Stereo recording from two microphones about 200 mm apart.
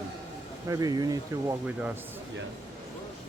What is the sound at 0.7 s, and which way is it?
Speech, 20° right (ahead or behind).